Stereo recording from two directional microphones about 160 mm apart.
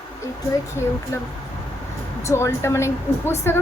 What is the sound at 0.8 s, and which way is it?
A woman's voice, 15° left (ahead or behind).